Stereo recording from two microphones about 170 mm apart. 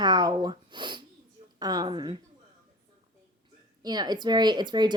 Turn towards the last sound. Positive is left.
turn(degrees=-25)  # may be behind; listen again after turning